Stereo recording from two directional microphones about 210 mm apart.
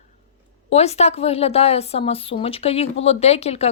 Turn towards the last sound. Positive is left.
turn(degrees=30)  # may be behind; listen again after turning